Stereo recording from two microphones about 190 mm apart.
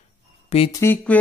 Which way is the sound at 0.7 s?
10° left (ahead or behind).